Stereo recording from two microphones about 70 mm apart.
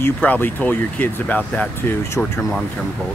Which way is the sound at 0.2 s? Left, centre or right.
Left.